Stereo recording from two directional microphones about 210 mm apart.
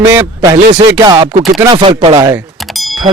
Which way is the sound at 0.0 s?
15° right (ahead or behind).